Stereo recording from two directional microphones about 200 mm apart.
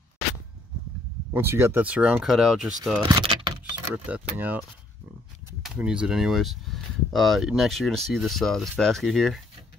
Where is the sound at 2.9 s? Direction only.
20° right (ahead or behind).